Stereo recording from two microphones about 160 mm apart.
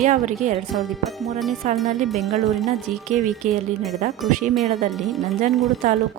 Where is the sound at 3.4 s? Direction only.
50° right (ahead or behind).